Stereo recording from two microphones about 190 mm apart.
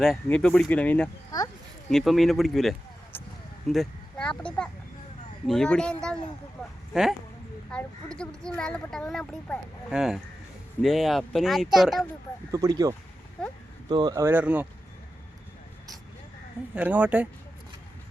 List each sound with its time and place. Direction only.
0.0 s speech: centre (ahead or behind)
12.5 s speech: 15° right (ahead or behind)
13.9 s speech: 20° right (ahead or behind)
16.7 s speech: 5° right (ahead or behind)